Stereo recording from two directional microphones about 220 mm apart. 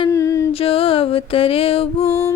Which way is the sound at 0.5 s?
25° left (ahead or behind).